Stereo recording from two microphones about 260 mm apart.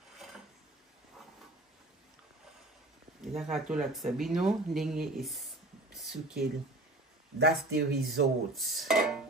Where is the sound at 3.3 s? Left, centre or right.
Centre.